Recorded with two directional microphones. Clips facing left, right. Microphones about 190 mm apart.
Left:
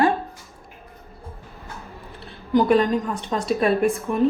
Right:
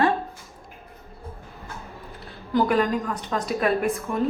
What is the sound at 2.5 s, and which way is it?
A woman's voice, 20° left (ahead or behind).